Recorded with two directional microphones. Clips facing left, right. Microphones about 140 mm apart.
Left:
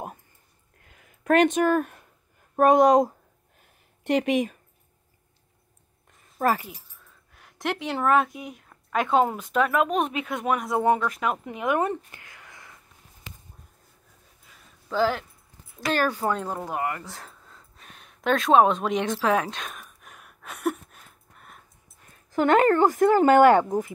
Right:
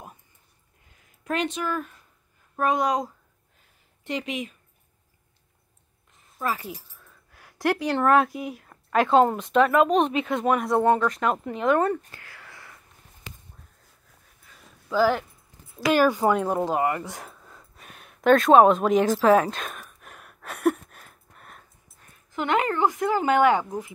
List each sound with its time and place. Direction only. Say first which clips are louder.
0.8 s a sound: left 8 dB; 60° left (ahead or behind)
2.5 s a woman's voice: left 7 dB; 50° left (ahead or behind)
4.0 s speech: left 7 dB; 60° left (ahead or behind)
6.3 s speech: left 5 dB; 45° left (ahead or behind)
6.7 s speech: right 7 dB; 5° right (ahead or behind); by 12.0 s 15° left (ahead or behind)
12.1 s a sound: right 2 dB; 20° left (ahead or behind)
14.9 s speech: right 3 dB; 5° right (ahead or behind)
20.4 s a sound: right 5 dB; 55° right (ahead or behind)
22.3 s a woman's voice: left 6 dB; 45° left (ahead or behind)